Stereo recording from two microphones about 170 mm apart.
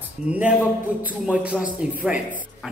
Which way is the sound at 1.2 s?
5° right (ahead or behind).